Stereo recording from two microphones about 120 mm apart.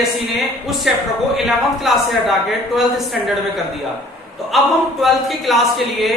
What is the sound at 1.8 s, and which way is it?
Speech, centre (ahead or behind).